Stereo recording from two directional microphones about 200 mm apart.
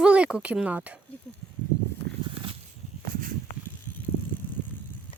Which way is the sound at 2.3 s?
25° right (ahead or behind).